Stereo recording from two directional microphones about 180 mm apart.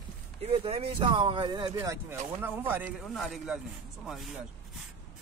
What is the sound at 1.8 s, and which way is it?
Speech, 15° right (ahead or behind).